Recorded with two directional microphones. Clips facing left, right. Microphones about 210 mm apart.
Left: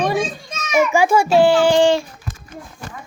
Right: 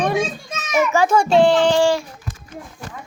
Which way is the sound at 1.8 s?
25° left (ahead or behind).